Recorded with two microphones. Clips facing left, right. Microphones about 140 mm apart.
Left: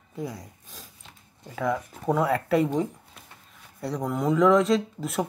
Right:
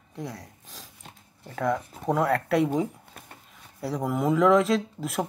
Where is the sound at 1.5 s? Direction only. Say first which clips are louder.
Even; centre (ahead or behind).